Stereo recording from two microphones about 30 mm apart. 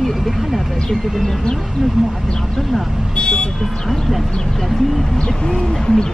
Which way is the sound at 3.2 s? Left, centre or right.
Left.